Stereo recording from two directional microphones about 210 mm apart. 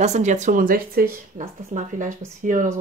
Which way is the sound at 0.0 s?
35° right (ahead or behind).